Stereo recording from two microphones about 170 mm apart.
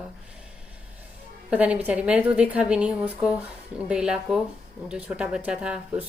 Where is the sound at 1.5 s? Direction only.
5° right (ahead or behind).